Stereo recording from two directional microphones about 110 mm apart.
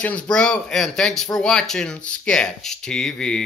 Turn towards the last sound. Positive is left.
turn(degrees=5)  # may be behind; listen again after turning